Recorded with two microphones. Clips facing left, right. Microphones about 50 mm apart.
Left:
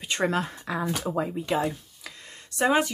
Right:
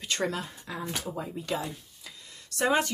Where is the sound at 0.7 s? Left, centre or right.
Left.